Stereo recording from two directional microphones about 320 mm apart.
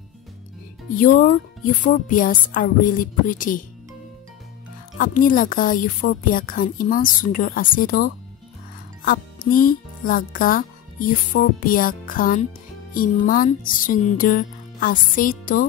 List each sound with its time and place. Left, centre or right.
0.9 s a woman's voice: left
4.9 s a woman's voice: left